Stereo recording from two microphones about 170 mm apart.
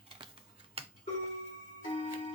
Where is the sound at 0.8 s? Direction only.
35° right (ahead or behind).